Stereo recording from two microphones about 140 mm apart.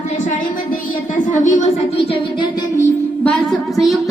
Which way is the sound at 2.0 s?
40° left (ahead or behind).